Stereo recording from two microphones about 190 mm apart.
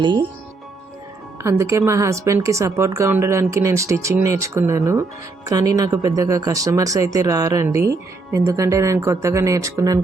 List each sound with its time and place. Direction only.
0.0 s speech: 25° right (ahead or behind)
1.4 s speech: 15° right (ahead or behind)